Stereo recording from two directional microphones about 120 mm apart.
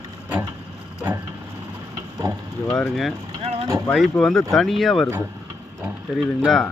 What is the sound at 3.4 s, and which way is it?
Vehicle, 55° right (ahead or behind).